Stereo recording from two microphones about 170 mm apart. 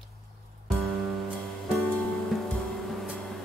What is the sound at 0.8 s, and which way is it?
Music, centre (ahead or behind).